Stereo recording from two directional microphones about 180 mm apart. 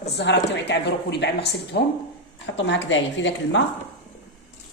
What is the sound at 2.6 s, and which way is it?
A woman's voice, 85° left.